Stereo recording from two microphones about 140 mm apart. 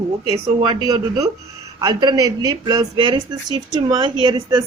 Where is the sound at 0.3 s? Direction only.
30° right (ahead or behind).